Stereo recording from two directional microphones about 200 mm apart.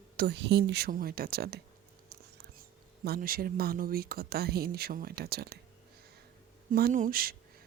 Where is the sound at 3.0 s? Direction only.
50° right (ahead or behind).